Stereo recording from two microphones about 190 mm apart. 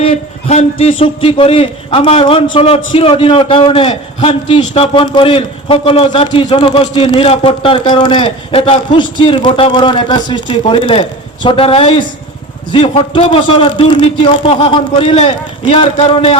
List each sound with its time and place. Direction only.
0.0 s a man's voice: 30° left (ahead or behind)